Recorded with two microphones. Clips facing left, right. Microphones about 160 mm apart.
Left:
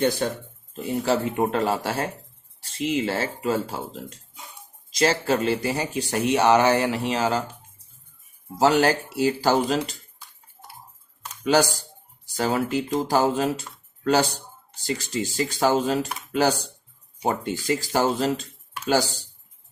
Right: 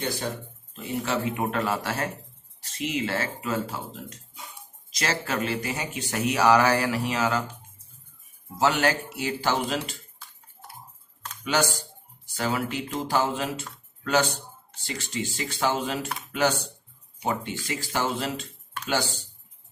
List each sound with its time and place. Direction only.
0.8 s speech: 35° left (ahead or behind)
4.9 s speech: 30° left (ahead or behind)
8.5 s speech: 35° left (ahead or behind)
11.4 s speech: 35° left (ahead or behind)